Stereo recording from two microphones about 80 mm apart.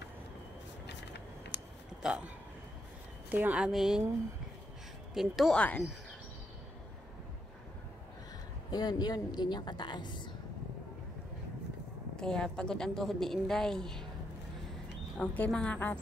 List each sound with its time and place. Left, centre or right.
2.0 s a woman's voice: centre
3.5 s a woman's voice: centre
5.1 s a woman's voice: centre
5.5 s a woman's voice: centre
8.6 s a woman's voice: left
12.2 s a woman's voice: centre
15.2 s a woman's voice: centre
15.5 s a woman's voice: centre